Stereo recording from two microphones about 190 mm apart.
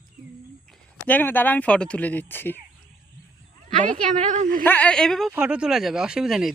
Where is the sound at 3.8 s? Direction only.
40° right (ahead or behind).